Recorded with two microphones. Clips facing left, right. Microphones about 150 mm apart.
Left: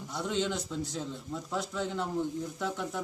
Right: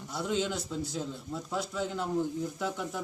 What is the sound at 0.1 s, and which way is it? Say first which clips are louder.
A man's voice: right 1 dB; 5° right (ahead or behind).